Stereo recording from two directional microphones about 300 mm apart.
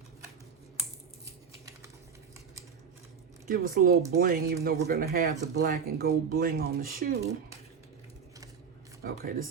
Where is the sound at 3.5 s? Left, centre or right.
Right.